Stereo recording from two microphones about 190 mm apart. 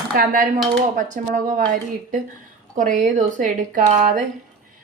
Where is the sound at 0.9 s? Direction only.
45° right (ahead or behind).